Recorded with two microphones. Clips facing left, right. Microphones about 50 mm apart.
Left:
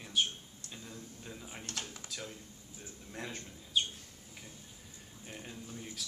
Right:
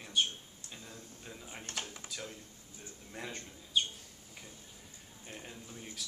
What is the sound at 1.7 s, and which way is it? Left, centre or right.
Speech, centre.